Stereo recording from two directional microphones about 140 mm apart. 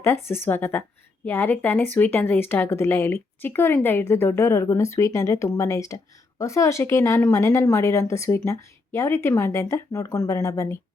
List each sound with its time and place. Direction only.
0.0 s speech: 15° left (ahead or behind)